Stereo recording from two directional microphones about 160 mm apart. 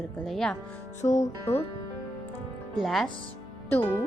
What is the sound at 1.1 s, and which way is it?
Music, 45° left (ahead or behind).